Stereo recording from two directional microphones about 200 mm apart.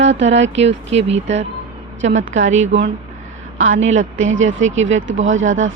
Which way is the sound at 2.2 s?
75° right (ahead or behind).